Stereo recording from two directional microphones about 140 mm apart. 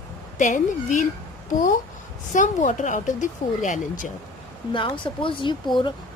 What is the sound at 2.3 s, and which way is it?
Speech, 65° left (ahead or behind).